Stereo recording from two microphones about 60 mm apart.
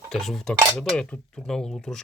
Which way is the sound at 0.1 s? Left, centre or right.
Centre.